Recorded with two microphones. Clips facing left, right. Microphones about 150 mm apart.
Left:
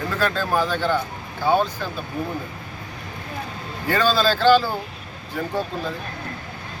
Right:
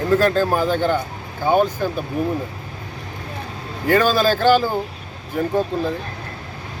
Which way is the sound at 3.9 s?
15° right (ahead or behind).